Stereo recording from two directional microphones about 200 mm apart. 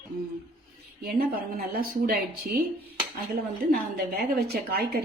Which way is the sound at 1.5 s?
50° right (ahead or behind).